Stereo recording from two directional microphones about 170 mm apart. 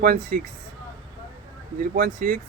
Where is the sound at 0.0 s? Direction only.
55° right (ahead or behind).